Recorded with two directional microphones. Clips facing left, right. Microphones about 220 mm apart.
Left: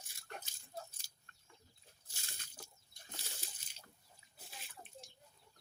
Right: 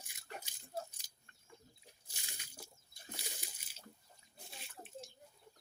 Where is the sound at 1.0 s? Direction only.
15° right (ahead or behind).